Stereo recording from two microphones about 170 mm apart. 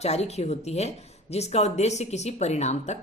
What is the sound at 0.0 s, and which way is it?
Speech, 40° left (ahead or behind).